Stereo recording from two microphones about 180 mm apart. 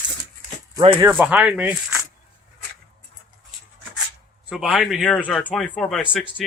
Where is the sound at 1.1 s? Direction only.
5° right (ahead or behind).